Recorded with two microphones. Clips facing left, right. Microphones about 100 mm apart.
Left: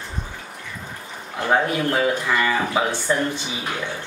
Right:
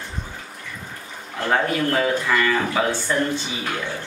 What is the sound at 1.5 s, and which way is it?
Speech, 15° left (ahead or behind).